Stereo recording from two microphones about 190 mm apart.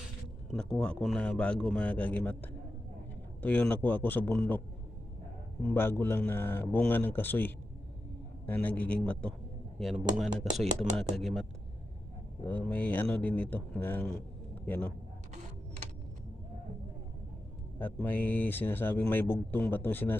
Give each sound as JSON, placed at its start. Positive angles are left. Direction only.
{"t": 0.5, "sound": "a man's voice", "side_deg": 5}
{"t": 5.6, "sound": "a man's voice", "side_deg": 10}
{"t": 10.2, "sound": "speech", "side_deg": -20}
{"t": 10.8, "sound": "a man's voice", "side_deg": 5}
{"t": 12.5, "sound": "speech", "side_deg": 10}
{"t": 17.7, "sound": "speech", "side_deg": 10}